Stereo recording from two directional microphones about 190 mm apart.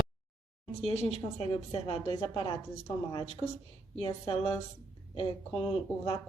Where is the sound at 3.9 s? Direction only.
30° left (ahead or behind).